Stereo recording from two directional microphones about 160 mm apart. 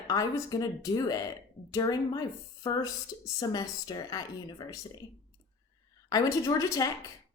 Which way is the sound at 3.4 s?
25° left (ahead or behind).